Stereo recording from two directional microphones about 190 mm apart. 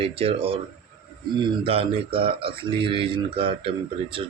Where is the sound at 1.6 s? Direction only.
30° right (ahead or behind).